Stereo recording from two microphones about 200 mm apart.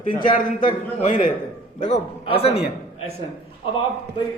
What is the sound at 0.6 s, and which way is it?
A man's voice, 35° left (ahead or behind).